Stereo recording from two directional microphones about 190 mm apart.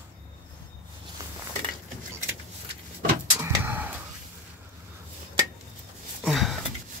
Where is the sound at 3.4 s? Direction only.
10° right (ahead or behind).